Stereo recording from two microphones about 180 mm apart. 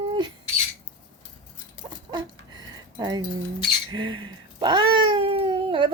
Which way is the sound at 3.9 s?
25° right (ahead or behind).